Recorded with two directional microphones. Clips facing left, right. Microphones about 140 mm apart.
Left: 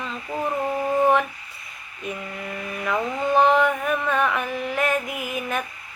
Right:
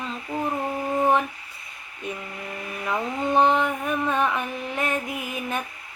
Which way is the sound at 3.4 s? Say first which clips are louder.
Left 2 dB; 30° right (ahead or behind).